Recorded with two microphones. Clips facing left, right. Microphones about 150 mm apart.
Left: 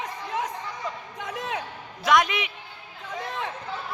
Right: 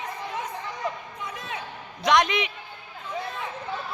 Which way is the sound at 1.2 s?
90° left.